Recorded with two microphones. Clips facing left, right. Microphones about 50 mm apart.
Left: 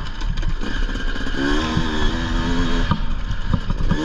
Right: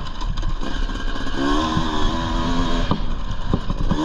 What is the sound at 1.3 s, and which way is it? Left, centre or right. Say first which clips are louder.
Vehicle: right 1 dB; left.